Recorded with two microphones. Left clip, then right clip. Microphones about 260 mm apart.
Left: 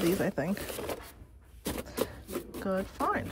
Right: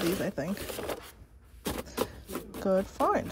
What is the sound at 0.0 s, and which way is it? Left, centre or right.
Speech, centre.